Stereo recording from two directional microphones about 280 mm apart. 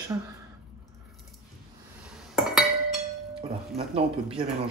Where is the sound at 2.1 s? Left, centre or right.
Centre.